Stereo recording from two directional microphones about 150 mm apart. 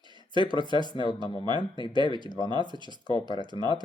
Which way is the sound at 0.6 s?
30° right (ahead or behind).